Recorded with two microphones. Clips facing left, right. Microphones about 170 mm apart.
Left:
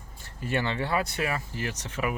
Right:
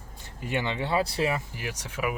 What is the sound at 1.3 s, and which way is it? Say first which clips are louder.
Speech: even; 10° right (ahead or behind).